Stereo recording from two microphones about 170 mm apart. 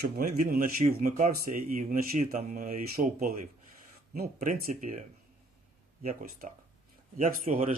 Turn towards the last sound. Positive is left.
turn(degrees=-55)  # may be behind; listen again after turning